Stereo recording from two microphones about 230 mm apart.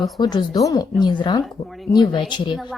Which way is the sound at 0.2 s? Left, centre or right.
Centre.